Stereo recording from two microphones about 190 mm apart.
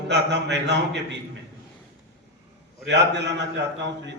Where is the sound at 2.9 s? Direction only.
65° right (ahead or behind).